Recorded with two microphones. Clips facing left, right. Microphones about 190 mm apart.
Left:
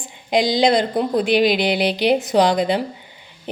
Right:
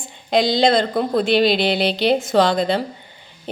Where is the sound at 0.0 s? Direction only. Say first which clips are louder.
Right 1 dB; 15° left (ahead or behind).